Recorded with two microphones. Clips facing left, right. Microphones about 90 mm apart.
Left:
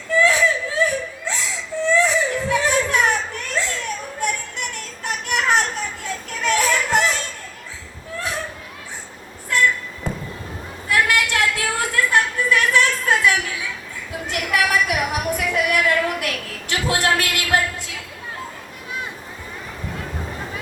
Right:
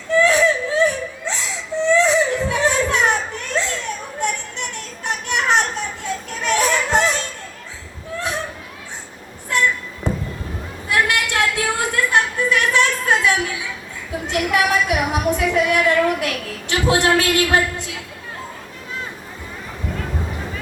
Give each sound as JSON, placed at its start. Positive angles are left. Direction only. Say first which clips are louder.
{"t": 0.2, "sound": "whimper", "louder": "right 2 dB", "side_deg": -20}
{"t": 4.2, "sound": "children playing", "louder": "right 2 dB", "side_deg": -20}
{"t": 6.4, "sound": "music", "louder": "right 1 dB", "side_deg": -20}
{"t": 9.5, "sound": "a sound", "louder": "even", "side_deg": -20}